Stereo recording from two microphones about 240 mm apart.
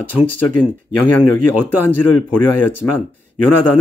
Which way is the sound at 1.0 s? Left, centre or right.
Centre.